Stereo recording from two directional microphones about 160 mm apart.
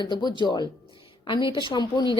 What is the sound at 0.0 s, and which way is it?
A woman's voice, 30° left (ahead or behind).